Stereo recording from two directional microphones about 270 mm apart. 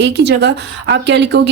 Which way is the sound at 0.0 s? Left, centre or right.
Right.